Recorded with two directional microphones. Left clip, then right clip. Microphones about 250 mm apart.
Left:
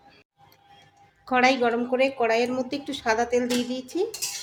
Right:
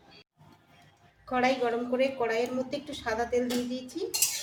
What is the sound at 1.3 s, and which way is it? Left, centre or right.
A woman's voice, left.